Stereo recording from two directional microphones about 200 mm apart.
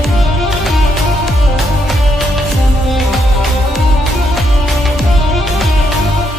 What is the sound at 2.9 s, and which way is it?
Music, centre (ahead or behind).